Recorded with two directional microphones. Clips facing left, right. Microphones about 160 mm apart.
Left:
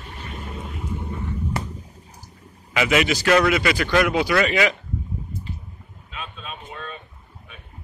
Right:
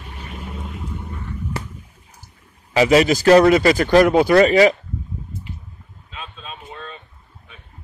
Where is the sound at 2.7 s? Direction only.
35° right (ahead or behind).